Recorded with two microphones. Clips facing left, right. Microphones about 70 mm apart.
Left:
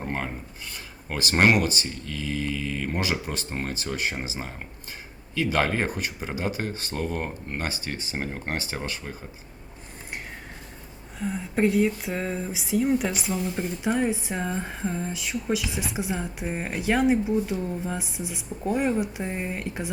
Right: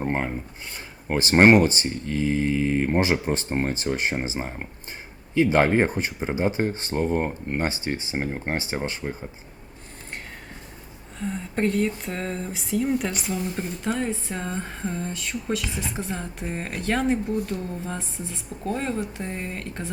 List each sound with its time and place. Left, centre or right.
0.0 s a sound: right
1.0 s speech: right
11.2 s speech: centre